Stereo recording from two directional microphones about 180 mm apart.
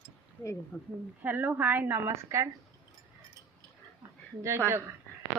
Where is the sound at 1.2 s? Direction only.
10° right (ahead or behind).